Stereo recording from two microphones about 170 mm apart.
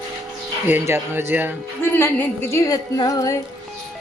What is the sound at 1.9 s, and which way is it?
A woman's voice, 15° left (ahead or behind).